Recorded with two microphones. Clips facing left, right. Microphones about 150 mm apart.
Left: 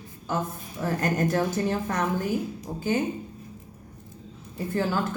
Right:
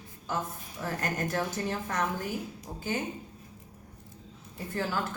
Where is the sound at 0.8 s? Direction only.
35° left (ahead or behind).